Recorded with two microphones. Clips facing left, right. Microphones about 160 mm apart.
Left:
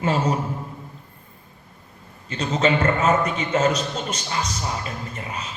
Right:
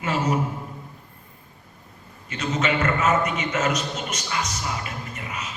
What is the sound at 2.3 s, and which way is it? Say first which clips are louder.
A man's voice: left 4 dB; 30° left (ahead or behind).